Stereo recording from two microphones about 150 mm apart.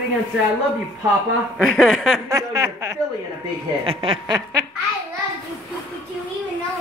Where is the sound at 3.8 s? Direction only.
40° right (ahead or behind).